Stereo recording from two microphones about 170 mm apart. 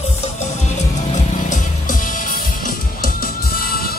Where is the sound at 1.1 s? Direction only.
50° left (ahead or behind).